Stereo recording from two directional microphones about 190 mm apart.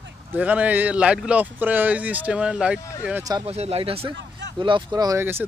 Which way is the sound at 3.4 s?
35° right (ahead or behind).